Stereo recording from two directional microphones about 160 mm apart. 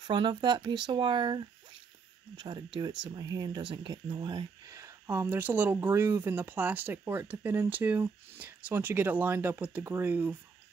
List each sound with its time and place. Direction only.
0.0 s speech: 30° right (ahead or behind); by 10.3 s 10° right (ahead or behind)